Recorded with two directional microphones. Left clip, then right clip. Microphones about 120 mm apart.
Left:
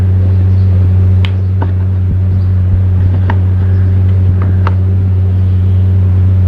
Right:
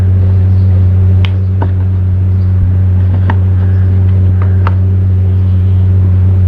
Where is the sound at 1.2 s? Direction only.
65° right (ahead or behind).